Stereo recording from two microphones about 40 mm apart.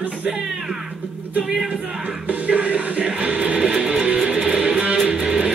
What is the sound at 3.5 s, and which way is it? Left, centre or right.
Music, centre.